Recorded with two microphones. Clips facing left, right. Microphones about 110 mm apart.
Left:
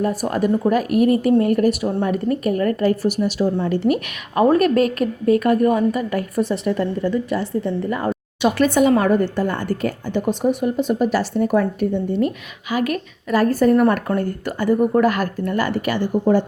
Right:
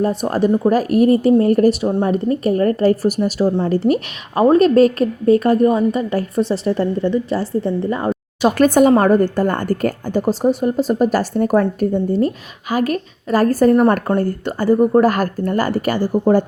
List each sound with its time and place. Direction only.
0.0 s a woman's voice: 25° right (ahead or behind)
8.4 s a woman's voice: 45° right (ahead or behind)